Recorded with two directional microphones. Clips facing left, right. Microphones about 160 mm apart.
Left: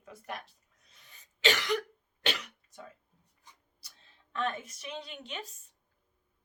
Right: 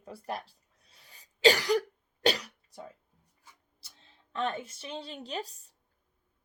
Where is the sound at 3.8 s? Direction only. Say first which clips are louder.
Right 2 dB; 30° right (ahead or behind).